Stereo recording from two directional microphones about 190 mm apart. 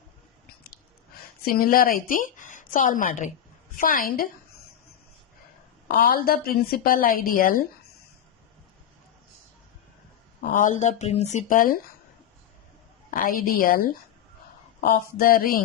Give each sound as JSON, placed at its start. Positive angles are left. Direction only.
{"t": 1.5, "sound": "a woman's voice", "side_deg": 50}
{"t": 5.9, "sound": "a woman's voice", "side_deg": 50}
{"t": 10.5, "sound": "speech", "side_deg": 40}
{"t": 13.1, "sound": "a woman's voice", "side_deg": 45}
{"t": 15.2, "sound": "a woman's voice", "side_deg": 50}